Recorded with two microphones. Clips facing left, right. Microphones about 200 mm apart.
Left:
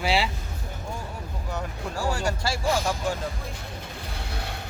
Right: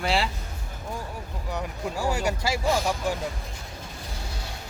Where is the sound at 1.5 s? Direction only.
15° right (ahead or behind).